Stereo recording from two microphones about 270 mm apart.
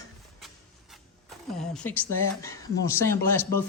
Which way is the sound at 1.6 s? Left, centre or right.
Centre.